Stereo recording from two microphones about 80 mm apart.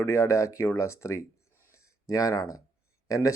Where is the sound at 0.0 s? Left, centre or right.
Left.